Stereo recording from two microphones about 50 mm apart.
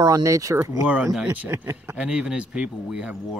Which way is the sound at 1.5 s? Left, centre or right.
Right.